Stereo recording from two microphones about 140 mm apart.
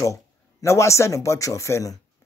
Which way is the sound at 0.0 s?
20° left (ahead or behind).